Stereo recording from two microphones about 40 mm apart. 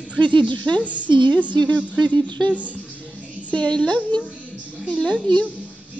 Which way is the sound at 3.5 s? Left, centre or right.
Left.